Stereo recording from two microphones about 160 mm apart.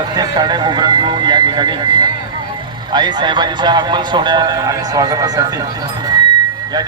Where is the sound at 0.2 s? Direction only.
25° right (ahead or behind).